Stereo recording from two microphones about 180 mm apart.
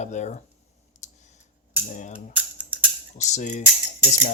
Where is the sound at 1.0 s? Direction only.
40° left (ahead or behind).